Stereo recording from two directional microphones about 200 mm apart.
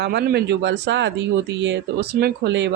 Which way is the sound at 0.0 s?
55° right (ahead or behind).